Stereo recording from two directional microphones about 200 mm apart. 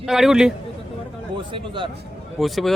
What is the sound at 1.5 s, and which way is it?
Speech, 25° right (ahead or behind).